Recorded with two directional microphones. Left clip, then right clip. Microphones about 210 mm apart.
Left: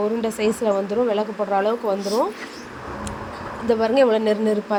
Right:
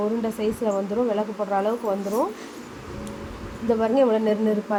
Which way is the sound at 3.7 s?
15° left (ahead or behind).